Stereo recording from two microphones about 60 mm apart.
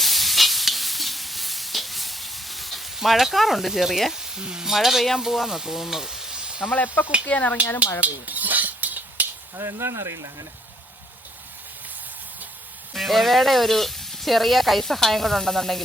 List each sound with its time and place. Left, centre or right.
0.0 s stir: centre
4.4 s speech: centre
6.7 s speech: left
8.0 s dishes: right
9.6 s speech: right
12.9 s frying: centre